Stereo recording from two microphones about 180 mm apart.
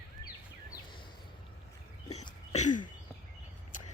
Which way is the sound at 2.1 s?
40° left (ahead or behind).